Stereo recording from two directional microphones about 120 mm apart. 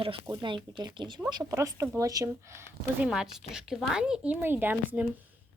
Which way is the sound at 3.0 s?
5° right (ahead or behind).